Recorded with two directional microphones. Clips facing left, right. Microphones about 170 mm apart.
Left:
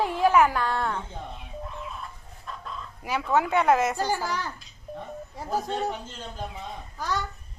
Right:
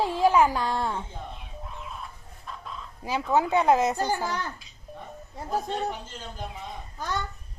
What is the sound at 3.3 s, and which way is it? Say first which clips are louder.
Speech: even; 20° right (ahead or behind).